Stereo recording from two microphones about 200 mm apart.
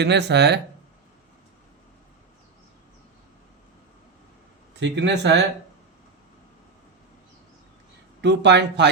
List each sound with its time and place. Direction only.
0.0 s speech: 60° right (ahead or behind)
4.8 s speech: 60° right (ahead or behind)
8.2 s speech: 60° right (ahead or behind)